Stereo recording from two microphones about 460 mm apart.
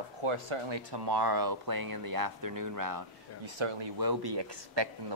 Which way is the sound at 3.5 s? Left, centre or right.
Right.